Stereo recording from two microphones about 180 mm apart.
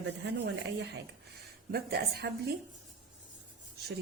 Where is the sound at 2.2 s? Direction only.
65° right (ahead or behind).